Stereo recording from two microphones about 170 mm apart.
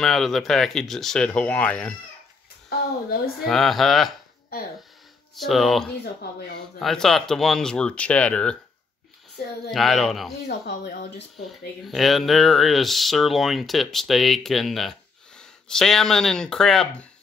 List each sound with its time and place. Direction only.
0.0 s speech: centre (ahead or behind)
3.4 s speech: centre (ahead or behind)
5.3 s speech: centre (ahead or behind)
9.7 s speech: centre (ahead or behind)
10.4 s speech: 85° left
11.8 s speech: centre (ahead or behind)